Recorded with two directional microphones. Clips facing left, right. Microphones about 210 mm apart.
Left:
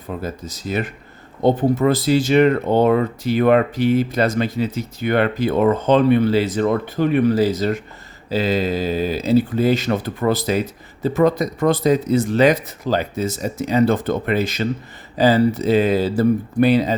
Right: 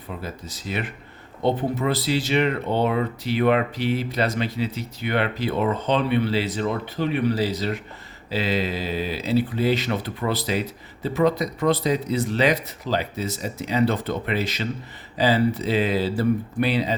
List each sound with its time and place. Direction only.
0.2 s speech: 45° left (ahead or behind)